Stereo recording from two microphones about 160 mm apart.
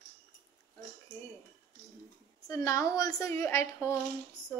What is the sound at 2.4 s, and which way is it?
A woman's voice, 20° left (ahead or behind).